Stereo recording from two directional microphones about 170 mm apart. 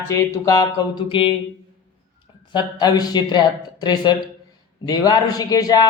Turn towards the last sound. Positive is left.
turn(degrees=20)  # may be behind; listen again after turning